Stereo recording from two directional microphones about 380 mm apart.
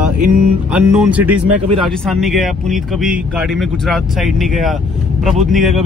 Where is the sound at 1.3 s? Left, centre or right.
Right.